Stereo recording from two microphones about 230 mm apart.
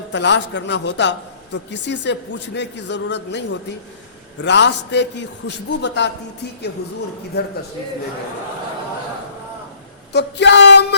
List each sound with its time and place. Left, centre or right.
0.1 s a man's voice: left
10.1 s a man's voice: left